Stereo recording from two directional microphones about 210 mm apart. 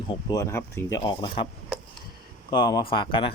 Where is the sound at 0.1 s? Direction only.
20° left (ahead or behind).